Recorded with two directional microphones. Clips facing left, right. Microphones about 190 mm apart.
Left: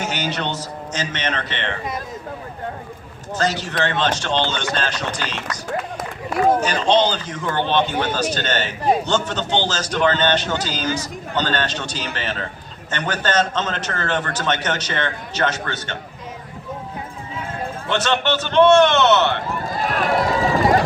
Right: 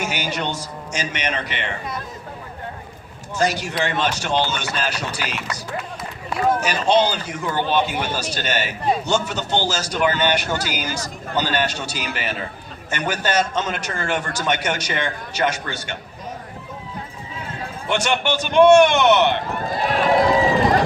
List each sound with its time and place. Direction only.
0.0 s a man's voice: 10° right (ahead or behind)
3.3 s a man's voice: 10° right (ahead or behind)
6.6 s a man's voice: 10° right (ahead or behind)
17.8 s a man's voice: 10° right (ahead or behind)
19.8 s run: 45° left (ahead or behind)